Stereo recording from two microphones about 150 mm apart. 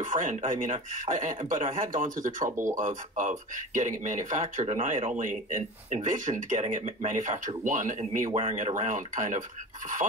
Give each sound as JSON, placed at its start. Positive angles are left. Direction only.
{"t": 0.0, "sound": "speech", "side_deg": -55}
{"t": 2.5, "sound": "speech", "side_deg": -20}
{"t": 2.8, "sound": "speech", "side_deg": -60}
{"t": 8.3, "sound": "speech", "side_deg": -40}
{"t": 8.5, "sound": "speech", "side_deg": -55}